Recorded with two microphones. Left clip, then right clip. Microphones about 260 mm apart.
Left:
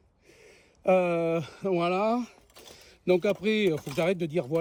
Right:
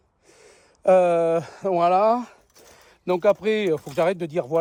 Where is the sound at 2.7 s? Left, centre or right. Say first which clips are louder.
Right 1 dB; centre.